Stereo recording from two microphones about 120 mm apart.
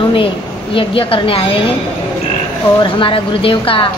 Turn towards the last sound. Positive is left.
turn(degrees=50)  # may be behind; listen again after turning